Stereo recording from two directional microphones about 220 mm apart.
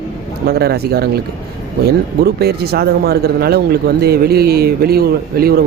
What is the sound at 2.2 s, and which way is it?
Speech, 45° right (ahead or behind).